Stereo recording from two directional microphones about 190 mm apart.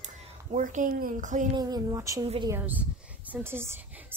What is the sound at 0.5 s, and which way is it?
Speech, 40° right (ahead or behind).